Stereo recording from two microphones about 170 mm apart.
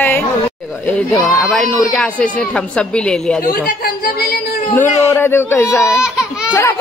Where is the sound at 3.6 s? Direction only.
60° left (ahead or behind).